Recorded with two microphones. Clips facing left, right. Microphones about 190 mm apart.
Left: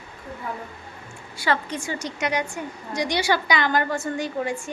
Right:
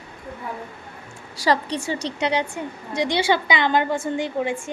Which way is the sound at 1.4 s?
35° right (ahead or behind).